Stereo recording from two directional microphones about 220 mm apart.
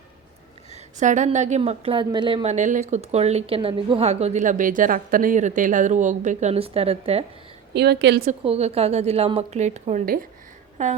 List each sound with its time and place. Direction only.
0.7 s a woman's voice: 35° right (ahead or behind)
7.7 s a woman's voice: 50° right (ahead or behind)
8.3 s a woman's voice: 30° right (ahead or behind)